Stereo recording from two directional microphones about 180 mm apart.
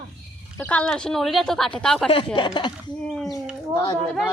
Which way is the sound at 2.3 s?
25° left (ahead or behind).